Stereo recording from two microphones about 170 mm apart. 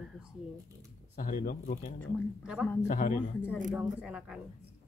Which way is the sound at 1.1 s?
55° left (ahead or behind).